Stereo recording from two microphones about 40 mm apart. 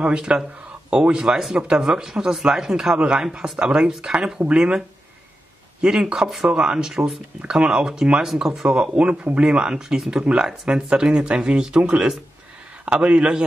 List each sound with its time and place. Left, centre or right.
0.0 s speech: right
1.2 s speech: centre
6.2 s speech: centre
6.5 s speech: right
8.3 s speech: centre
8.9 s speech: right
9.9 s speech: centre; by 13.4 s right